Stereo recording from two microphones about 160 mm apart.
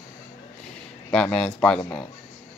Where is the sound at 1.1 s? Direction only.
5° left (ahead or behind).